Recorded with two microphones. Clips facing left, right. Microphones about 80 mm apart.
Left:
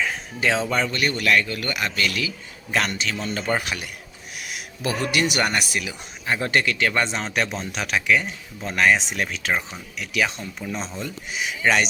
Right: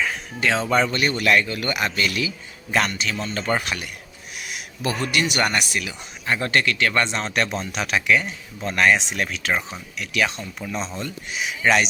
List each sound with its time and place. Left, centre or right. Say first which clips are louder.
0.7 s a man's voice: right 3 dB; centre
3.0 s speech: even; centre